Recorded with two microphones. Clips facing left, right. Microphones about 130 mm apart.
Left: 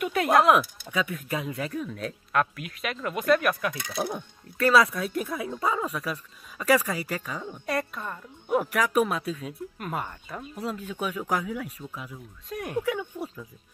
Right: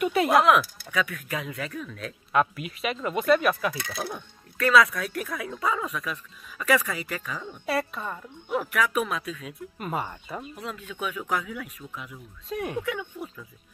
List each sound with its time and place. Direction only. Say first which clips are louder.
0.0 s speech: right 1 dB; 5° right (ahead or behind)
0.5 s speech: even; 25° left (ahead or behind)
2.3 s speech: right 3 dB; centre (ahead or behind)
3.9 s speech: left 3 dB; 25° left (ahead or behind)
7.6 s speech: right 2 dB; 5° right (ahead or behind)
8.5 s speech: left 2 dB; 40° left (ahead or behind)
9.8 s speech: right 4 dB; centre (ahead or behind)
10.6 s speech: left 5 dB; 35° left (ahead or behind)
12.1 s speech: right 2 dB; centre (ahead or behind)
13.2 s music: left 2 dB; 40° left (ahead or behind)